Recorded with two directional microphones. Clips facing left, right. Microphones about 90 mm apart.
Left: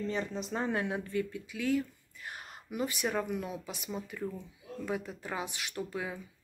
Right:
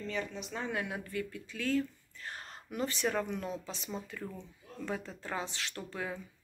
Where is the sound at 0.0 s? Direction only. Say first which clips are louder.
Left 3 dB; 35° left (ahead or behind).